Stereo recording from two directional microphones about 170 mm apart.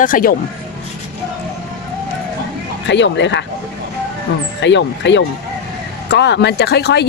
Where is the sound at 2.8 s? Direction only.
90° left.